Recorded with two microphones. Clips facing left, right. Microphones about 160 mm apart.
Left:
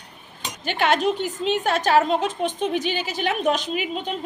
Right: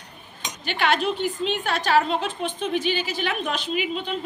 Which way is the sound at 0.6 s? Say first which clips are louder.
Left 2 dB; 45° left (ahead or behind).